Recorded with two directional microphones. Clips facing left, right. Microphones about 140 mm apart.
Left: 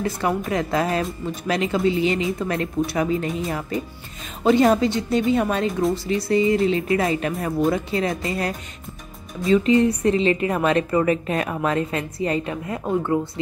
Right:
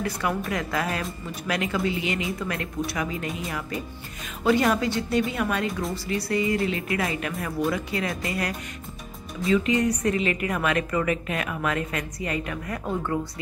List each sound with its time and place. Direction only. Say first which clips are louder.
0.0 s a woman's voice: left 4 dB; 25° left (ahead or behind)